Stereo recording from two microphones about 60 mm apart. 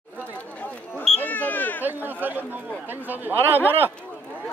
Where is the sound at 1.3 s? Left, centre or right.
Left.